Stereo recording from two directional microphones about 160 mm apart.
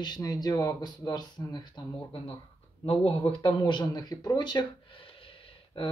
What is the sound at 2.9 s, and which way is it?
Speech, 35° left (ahead or behind).